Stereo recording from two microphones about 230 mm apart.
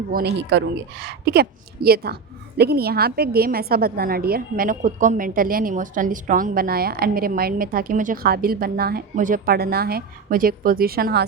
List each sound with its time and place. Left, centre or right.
0.1 s a woman's voice: right